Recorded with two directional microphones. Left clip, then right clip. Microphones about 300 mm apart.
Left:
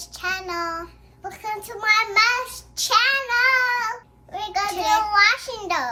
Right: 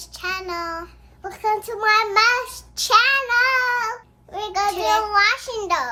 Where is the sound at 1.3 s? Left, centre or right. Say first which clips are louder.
Right 7 dB; centre.